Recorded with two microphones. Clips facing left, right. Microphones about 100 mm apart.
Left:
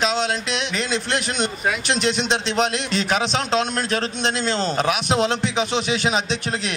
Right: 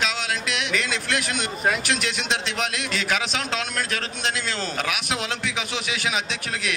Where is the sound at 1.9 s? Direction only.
25° left (ahead or behind).